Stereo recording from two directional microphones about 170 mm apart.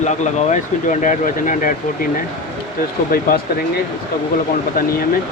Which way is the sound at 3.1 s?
65° left (ahead or behind).